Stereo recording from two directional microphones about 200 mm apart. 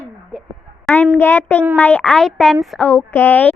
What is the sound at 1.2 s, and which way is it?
Child singing, 10° left (ahead or behind).